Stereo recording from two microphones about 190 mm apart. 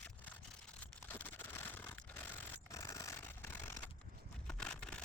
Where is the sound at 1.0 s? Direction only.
10° left (ahead or behind).